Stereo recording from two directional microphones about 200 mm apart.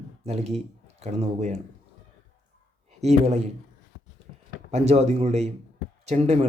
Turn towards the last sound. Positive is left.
turn(degrees=-35)  # may be behind; listen again after turning